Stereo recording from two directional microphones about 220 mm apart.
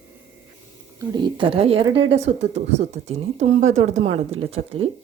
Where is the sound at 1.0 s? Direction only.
20° right (ahead or behind).